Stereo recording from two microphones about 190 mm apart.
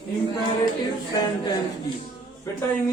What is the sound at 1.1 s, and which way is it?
Speech, 25° left (ahead or behind).